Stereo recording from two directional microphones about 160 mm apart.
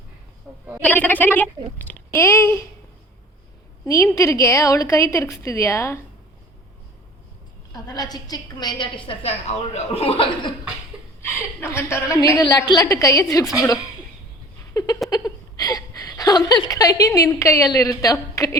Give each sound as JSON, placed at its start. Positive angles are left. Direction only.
{"t": 0.5, "sound": "a woman's voice", "side_deg": -5}
{"t": 0.8, "sound": "speech", "side_deg": 10}
{"t": 3.8, "sound": "a woman's voice", "side_deg": 20}
{"t": 7.7, "sound": "a woman's voice", "side_deg": 25}
{"t": 11.2, "sound": "a woman's voice", "side_deg": 15}
{"t": 14.7, "sound": "a sound", "side_deg": 20}